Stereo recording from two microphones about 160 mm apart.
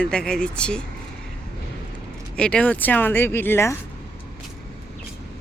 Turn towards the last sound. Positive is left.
turn(degrees=15)  # may be behind; listen again after turning